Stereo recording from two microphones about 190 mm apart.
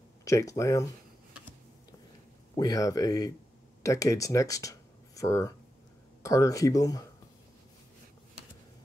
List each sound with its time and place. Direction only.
0.2 s speech: 15° left (ahead or behind)
2.5 s speech: 20° left (ahead or behind)